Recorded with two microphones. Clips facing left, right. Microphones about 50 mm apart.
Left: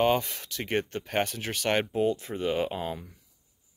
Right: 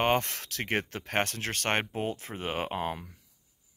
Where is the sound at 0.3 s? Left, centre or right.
Right.